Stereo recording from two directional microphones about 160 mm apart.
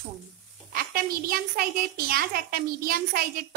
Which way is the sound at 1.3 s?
70° right (ahead or behind).